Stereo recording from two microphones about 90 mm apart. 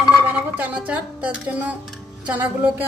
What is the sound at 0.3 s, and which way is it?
Speech, 15° right (ahead or behind).